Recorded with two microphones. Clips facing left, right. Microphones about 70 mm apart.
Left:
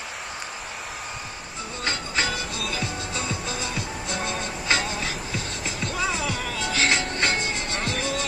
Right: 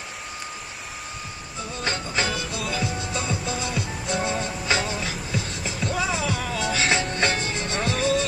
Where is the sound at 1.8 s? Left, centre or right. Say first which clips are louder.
Even; right.